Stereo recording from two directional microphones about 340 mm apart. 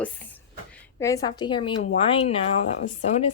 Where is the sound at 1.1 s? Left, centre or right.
Centre.